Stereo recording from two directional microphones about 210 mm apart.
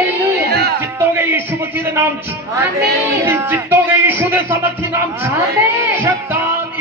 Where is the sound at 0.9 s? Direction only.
10° right (ahead or behind).